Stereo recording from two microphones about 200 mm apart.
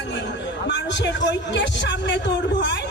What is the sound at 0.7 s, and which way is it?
Speech, 65° left (ahead or behind).